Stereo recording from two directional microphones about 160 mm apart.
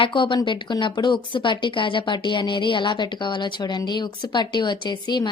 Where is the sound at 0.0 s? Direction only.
30° left (ahead or behind).